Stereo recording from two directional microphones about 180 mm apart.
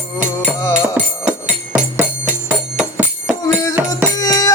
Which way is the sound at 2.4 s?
5° right (ahead or behind).